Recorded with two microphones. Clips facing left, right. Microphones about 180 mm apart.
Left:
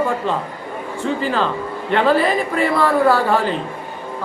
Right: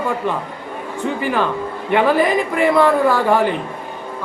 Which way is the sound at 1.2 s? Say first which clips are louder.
Right 3 dB; 15° right (ahead or behind).